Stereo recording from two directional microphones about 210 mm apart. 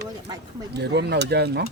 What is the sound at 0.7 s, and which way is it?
Speech, 50° right (ahead or behind).